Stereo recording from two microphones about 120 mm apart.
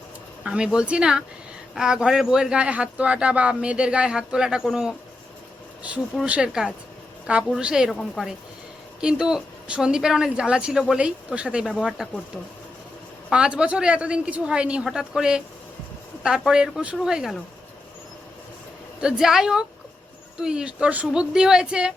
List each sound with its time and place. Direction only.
0.4 s speech: 10° right (ahead or behind)
13.3 s speech: 10° right (ahead or behind)
18.9 s speech: 5° right (ahead or behind)